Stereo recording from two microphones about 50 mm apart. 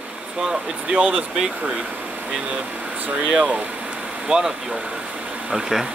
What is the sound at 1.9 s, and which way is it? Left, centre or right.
Speech, right.